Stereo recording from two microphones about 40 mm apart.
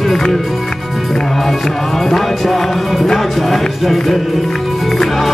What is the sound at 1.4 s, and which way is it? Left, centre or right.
Speech, centre.